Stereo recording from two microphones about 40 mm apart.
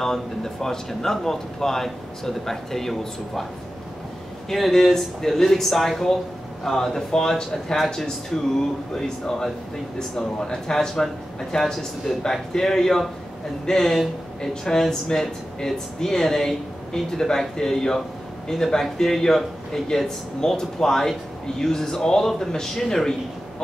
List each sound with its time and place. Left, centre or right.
0.0 s speech: centre
4.5 s speech: centre
12.2 s speech: centre